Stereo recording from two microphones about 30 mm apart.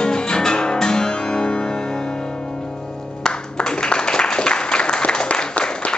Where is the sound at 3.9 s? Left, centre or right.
Left.